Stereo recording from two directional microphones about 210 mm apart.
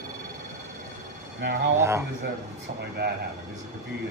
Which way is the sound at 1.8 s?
10° right (ahead or behind).